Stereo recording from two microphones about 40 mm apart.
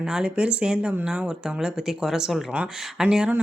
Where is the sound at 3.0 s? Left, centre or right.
Right.